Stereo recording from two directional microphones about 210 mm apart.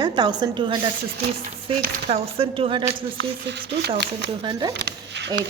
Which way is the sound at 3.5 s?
55° right (ahead or behind).